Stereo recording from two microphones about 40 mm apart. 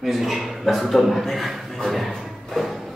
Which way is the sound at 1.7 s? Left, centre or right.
Centre.